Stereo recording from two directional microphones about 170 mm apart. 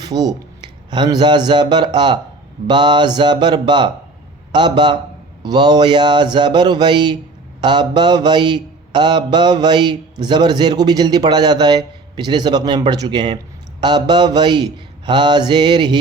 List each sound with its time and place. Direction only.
0.0 s speech: 20° right (ahead or behind)
2.6 s mantra: 25° right (ahead or behind)